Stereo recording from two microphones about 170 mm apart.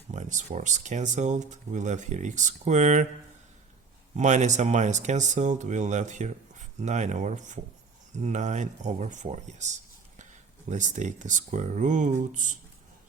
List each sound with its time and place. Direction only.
0.1 s speech: 45° right (ahead or behind)
4.2 s speech: 45° right (ahead or behind)
10.7 s speech: 45° right (ahead or behind)